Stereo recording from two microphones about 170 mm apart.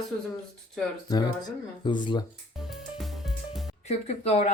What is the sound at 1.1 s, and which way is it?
Speech, 20° left (ahead or behind).